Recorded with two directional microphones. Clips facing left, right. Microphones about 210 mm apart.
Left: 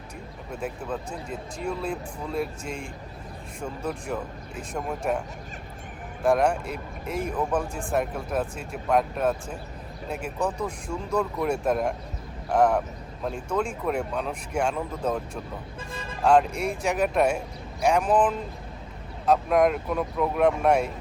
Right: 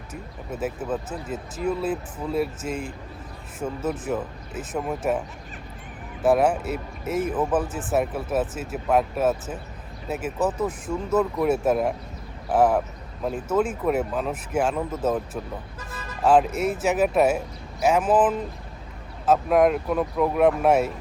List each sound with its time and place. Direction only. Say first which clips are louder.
0.5 s speech: right 4 dB; 5° right (ahead or behind)
6.2 s speech: right 2 dB; 5° right (ahead or behind)
15.9 s music: left 1 dB; 25° left (ahead or behind)
16.2 s speech: right 2 dB; 5° right (ahead or behind)